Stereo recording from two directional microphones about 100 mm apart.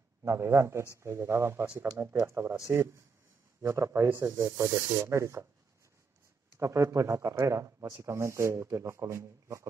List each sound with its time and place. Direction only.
0.2 s speech: 30° right (ahead or behind)
6.5 s speech: 30° right (ahead or behind)